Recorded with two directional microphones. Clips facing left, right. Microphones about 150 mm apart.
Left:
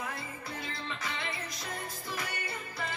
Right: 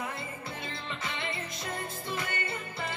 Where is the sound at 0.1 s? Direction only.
25° right (ahead or behind).